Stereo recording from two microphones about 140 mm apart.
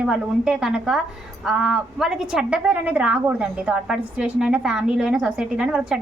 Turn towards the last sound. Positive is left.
turn(degrees=-5)  # may be behind; listen again after turning